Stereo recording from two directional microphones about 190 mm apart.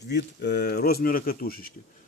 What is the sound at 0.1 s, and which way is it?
Speech, 60° left (ahead or behind).